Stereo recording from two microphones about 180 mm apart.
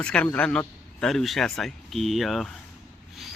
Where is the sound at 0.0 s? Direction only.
5° left (ahead or behind).